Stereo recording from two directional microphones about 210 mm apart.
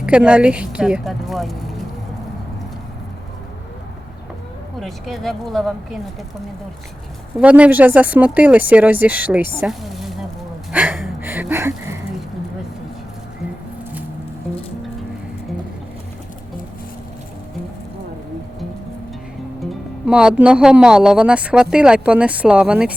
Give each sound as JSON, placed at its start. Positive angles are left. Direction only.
{"t": 0.0, "sound": "speech", "side_deg": -5}
{"t": 4.8, "sound": "speech", "side_deg": 0}
{"t": 7.3, "sound": "speech", "side_deg": -5}
{"t": 9.6, "sound": "a sound", "side_deg": 0}
{"t": 10.7, "sound": "gasp", "side_deg": -5}
{"t": 20.1, "sound": "speech", "side_deg": -5}